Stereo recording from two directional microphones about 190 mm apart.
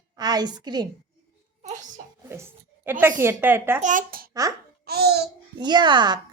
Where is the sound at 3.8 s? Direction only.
45° right (ahead or behind).